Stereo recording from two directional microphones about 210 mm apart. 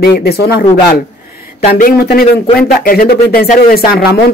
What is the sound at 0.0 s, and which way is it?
Speech, 50° left (ahead or behind).